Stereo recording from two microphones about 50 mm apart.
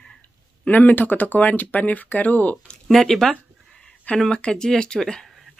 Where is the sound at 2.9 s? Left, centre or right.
Centre.